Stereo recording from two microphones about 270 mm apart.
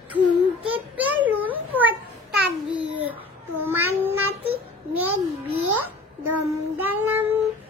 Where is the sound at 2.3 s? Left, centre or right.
Right.